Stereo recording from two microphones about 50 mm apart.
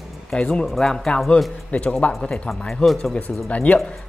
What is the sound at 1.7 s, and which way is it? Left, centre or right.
Speech, left.